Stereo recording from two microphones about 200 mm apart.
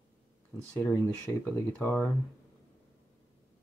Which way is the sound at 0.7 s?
10° left (ahead or behind).